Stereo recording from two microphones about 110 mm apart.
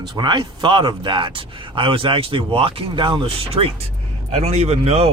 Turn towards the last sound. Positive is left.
turn(degrees=-75)  # may be behind; listen again after turning